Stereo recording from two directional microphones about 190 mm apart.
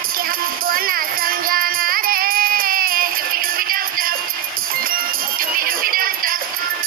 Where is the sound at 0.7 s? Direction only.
50° right (ahead or behind).